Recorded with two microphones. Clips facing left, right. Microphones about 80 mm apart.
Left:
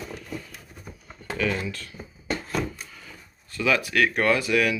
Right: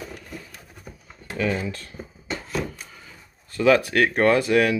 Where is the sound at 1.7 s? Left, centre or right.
Right.